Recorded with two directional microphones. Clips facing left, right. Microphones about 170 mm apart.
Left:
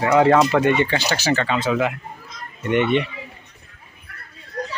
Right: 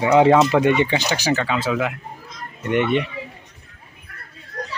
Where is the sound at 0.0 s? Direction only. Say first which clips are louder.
Right 1 dB; 15° right (ahead or behind); by 3.1 s centre (ahead or behind).